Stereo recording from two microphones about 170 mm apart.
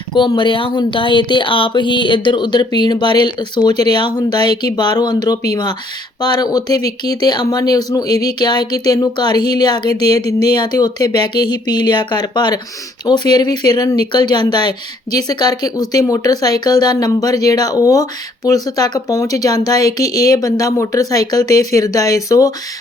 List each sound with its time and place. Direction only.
0.1 s speech: 30° left (ahead or behind)